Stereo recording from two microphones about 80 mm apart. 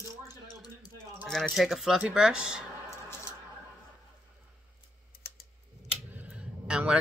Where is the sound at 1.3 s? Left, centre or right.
Centre.